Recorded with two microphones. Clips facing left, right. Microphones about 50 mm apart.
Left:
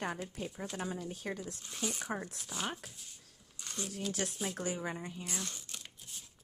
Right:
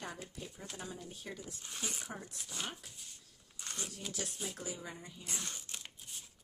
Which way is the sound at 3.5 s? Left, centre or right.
Centre.